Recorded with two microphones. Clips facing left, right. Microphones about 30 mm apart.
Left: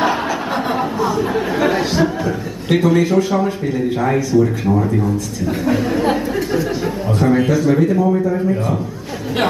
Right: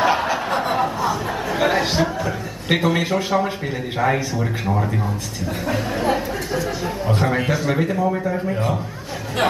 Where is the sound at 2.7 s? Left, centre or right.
Right.